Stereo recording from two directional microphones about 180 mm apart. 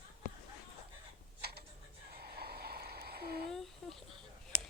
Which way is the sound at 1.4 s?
60° right (ahead or behind).